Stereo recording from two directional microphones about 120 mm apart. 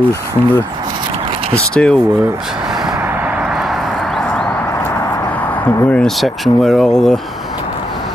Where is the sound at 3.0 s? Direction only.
10° right (ahead or behind); by 4.4 s 5° left (ahead or behind).